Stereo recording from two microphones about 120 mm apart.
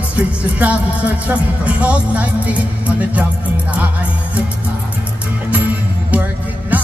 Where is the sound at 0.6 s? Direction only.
10° right (ahead or behind).